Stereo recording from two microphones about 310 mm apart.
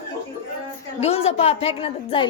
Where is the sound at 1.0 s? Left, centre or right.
Centre.